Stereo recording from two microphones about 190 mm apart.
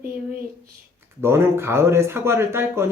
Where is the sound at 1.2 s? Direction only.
15° right (ahead or behind).